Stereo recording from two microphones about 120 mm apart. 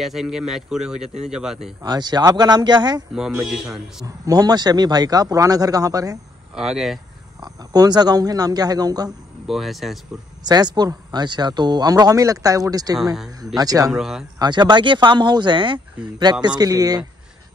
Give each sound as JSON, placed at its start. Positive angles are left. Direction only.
{"t": 0.0, "sound": "a man's voice", "side_deg": -5}
{"t": 1.8, "sound": "speech", "side_deg": -35}
{"t": 3.2, "sound": "a man's voice", "side_deg": -5}
{"t": 4.0, "sound": "speech", "side_deg": -30}
{"t": 6.5, "sound": "a man's voice", "side_deg": -5}
{"t": 7.7, "sound": "speech", "side_deg": -35}
{"t": 9.5, "sound": "a man's voice", "side_deg": 0}
{"t": 10.4, "sound": "speech", "side_deg": -35}
{"t": 13.9, "sound": "a man's voice", "side_deg": -5}
{"t": 14.4, "sound": "speech", "side_deg": -40}